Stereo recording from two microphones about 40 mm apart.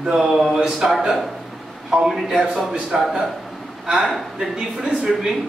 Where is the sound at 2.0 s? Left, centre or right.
Centre.